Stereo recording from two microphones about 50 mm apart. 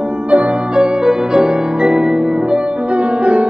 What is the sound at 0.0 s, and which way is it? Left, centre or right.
Music, right.